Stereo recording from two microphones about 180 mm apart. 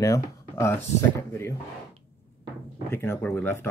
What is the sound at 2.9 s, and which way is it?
Speech, 10° left (ahead or behind).